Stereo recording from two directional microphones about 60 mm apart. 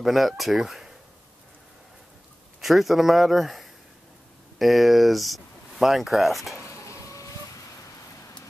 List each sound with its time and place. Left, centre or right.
0.0 s speech: centre
2.6 s speech: centre
6.5 s a sound: left